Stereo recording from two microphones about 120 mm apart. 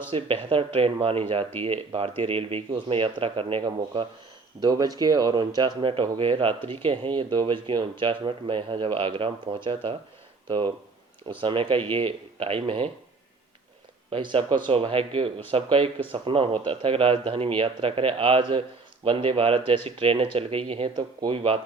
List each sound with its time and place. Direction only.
0.1 s speech: 50° right (ahead or behind)
4.6 s speech: 30° right (ahead or behind)
11.3 s speech: 45° right (ahead or behind)
14.1 s speech: 45° right (ahead or behind)